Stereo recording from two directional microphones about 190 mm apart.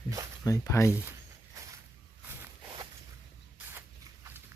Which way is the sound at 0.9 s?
10° right (ahead or behind).